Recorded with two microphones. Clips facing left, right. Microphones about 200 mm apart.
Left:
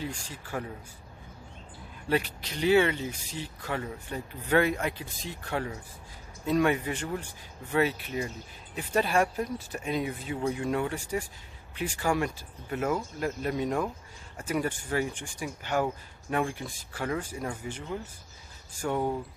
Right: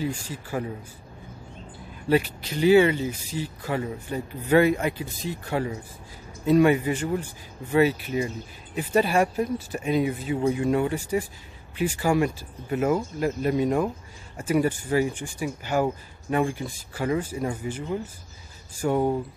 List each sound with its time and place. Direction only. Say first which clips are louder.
0.0 s speech: right 7 dB; 5° right (ahead or behind)
2.0 s speech: right 6 dB; 5° right (ahead or behind)